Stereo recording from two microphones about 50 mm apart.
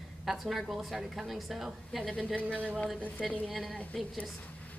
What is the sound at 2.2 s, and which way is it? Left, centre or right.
Speech, left.